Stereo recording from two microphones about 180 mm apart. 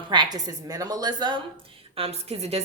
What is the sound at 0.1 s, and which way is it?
A woman's voice, 25° right (ahead or behind).